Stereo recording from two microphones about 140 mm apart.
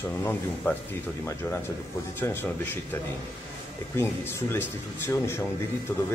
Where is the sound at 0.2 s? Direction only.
15° left (ahead or behind).